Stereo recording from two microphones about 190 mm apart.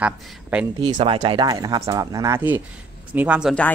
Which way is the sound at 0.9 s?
30° right (ahead or behind).